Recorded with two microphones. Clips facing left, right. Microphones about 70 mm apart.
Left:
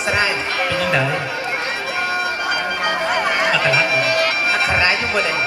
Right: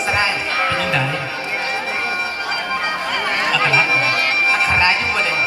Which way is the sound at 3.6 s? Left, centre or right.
Right.